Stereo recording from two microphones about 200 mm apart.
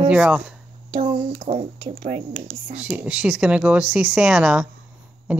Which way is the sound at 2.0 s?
50° right (ahead or behind).